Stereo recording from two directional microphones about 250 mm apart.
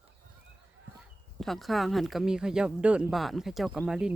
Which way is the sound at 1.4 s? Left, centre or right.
Centre.